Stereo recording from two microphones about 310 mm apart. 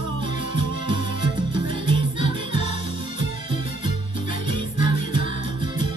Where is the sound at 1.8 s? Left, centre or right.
Centre.